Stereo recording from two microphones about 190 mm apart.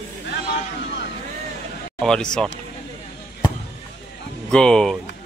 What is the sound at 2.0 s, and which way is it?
Speech, 5° left (ahead or behind).